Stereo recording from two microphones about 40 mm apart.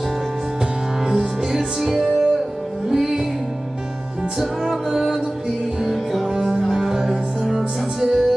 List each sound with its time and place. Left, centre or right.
1.0 s music: right
1.8 s music: centre
4.4 s music: centre
6.3 s music: centre